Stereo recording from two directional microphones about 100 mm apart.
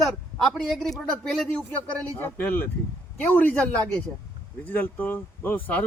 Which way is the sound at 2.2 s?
20° left (ahead or behind).